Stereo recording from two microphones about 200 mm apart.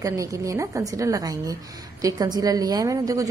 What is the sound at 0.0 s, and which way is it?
A woman's voice, 15° right (ahead or behind).